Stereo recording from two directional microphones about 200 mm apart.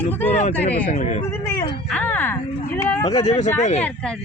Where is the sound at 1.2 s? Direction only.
15° left (ahead or behind).